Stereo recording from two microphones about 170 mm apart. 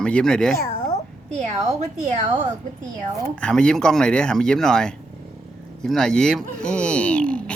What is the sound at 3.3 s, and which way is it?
Speech, 5° left (ahead or behind).